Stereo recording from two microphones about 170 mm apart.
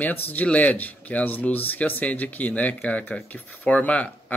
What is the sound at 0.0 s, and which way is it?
Speech, 10° left (ahead or behind).